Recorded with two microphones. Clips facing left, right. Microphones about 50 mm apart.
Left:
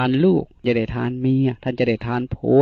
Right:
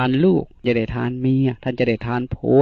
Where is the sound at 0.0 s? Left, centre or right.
Right.